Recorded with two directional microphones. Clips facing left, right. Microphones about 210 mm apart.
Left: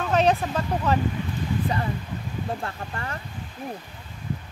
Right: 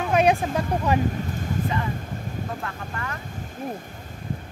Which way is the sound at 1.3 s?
45° right (ahead or behind).